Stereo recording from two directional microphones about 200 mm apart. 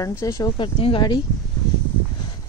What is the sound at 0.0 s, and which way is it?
Speech, 15° left (ahead or behind).